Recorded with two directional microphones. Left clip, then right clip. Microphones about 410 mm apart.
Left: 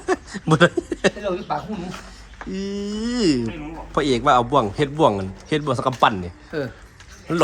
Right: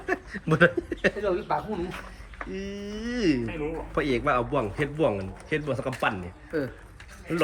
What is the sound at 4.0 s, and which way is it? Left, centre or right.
A man's voice, centre.